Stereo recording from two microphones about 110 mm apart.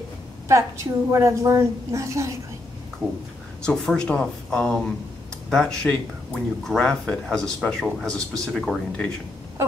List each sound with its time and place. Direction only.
0.5 s a woman's voice: 25° right (ahead or behind)
3.6 s speech: 5° left (ahead or behind)